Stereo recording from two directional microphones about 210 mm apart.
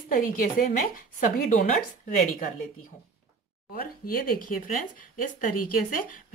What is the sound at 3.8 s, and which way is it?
Speech, 45° left (ahead or behind).